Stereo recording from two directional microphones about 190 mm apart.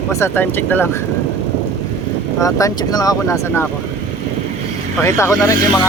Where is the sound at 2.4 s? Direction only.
15° left (ahead or behind).